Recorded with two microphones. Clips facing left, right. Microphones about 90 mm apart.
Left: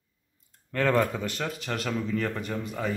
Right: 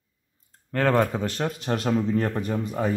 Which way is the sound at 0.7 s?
30° right (ahead or behind).